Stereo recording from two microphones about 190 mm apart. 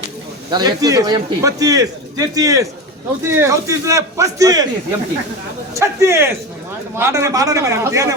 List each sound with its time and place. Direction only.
0.5 s a man's voice: 20° right (ahead or behind)